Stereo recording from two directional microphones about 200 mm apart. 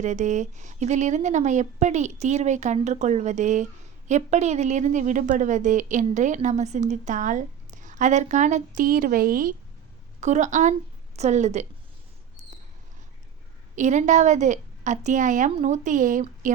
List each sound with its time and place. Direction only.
0.0 s a woman's voice: 35° right (ahead or behind)
13.7 s a woman's voice: 35° right (ahead or behind)